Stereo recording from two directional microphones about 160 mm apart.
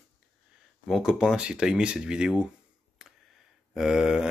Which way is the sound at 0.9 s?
5° right (ahead or behind).